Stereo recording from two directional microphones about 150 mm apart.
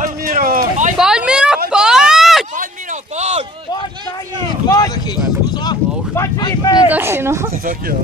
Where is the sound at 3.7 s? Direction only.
25° left (ahead or behind).